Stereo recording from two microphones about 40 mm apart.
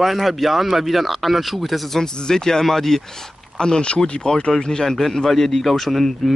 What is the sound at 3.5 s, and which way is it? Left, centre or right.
Speech, centre.